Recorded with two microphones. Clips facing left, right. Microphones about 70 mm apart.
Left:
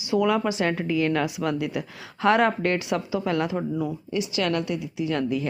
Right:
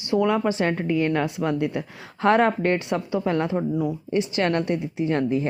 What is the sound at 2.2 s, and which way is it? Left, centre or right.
Speech, right.